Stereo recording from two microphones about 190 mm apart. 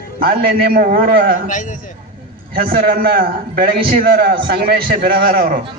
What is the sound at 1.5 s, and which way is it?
Speech, 40° left (ahead or behind).